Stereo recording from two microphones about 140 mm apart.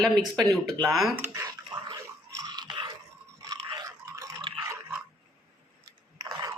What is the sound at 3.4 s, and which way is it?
Toothbrush, 25° right (ahead or behind).